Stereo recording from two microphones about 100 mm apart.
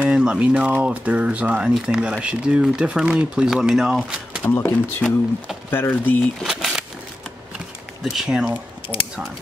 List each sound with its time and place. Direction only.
0.0 s speech: 10° right (ahead or behind)
4.4 s speech: 20° left (ahead or behind)
6.4 s a sound: 5° right (ahead or behind)
8.0 s speech: 5° right (ahead or behind)